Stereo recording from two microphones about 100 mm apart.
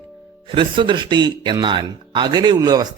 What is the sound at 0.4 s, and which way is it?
A man's voice, 55° right (ahead or behind).